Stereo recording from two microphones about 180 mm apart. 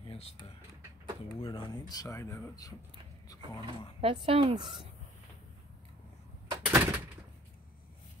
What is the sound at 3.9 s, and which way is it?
Speech, 30° right (ahead or behind).